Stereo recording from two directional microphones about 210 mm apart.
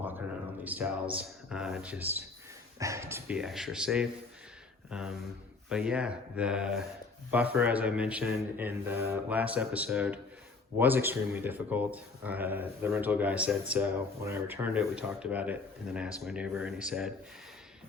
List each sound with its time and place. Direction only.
0.6 s speech: 10° right (ahead or behind)